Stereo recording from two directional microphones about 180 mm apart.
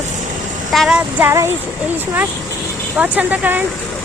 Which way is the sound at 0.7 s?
Centre (ahead or behind).